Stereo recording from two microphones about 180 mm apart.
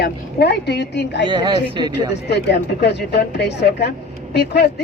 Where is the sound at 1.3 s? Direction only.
25° right (ahead or behind).